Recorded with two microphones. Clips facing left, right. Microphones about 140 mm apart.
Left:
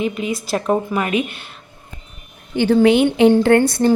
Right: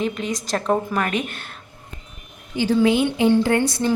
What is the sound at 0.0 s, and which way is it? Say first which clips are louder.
A woman's voice: left 3 dB; 10° left (ahead or behind).